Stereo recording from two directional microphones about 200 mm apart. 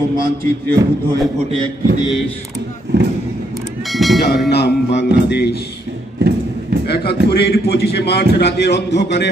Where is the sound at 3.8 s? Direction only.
Centre (ahead or behind).